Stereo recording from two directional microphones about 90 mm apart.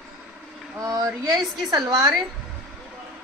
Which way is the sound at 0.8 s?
45° right (ahead or behind).